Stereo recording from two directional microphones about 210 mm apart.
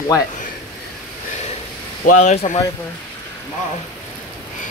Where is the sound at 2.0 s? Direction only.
35° left (ahead or behind).